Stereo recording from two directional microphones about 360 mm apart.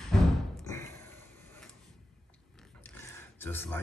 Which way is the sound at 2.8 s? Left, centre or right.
Centre.